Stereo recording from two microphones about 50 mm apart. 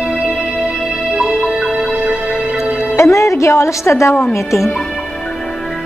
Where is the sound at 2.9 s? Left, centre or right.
Left.